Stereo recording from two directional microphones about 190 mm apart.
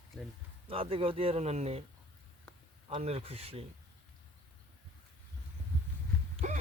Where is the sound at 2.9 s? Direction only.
30° right (ahead or behind).